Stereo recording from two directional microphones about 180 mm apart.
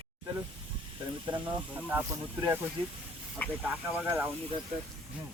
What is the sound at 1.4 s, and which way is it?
Speech, 10° right (ahead or behind).